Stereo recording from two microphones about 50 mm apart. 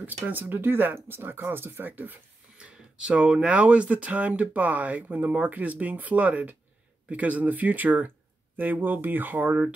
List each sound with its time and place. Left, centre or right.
0.0 s speech: right
2.5 s speech: centre; by 9.6 s right